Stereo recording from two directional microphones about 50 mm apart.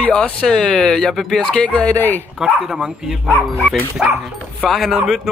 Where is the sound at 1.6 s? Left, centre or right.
Left.